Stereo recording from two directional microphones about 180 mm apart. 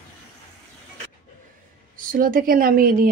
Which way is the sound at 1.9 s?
50° right (ahead or behind).